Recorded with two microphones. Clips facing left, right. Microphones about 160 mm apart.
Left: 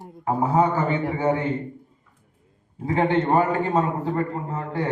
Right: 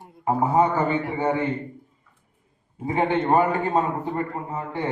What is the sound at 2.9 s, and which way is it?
A man's voice, 20° right (ahead or behind).